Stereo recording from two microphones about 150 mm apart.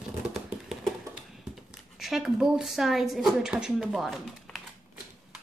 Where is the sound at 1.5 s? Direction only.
Centre (ahead or behind).